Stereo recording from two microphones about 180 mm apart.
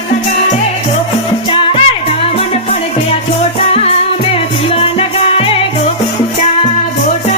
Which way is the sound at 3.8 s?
35° left (ahead or behind).